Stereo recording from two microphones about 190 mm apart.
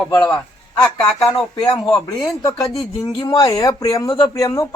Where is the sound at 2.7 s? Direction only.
25° left (ahead or behind).